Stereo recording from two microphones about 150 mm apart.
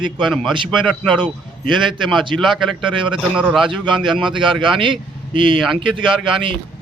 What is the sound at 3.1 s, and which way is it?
Speech, 5° right (ahead or behind).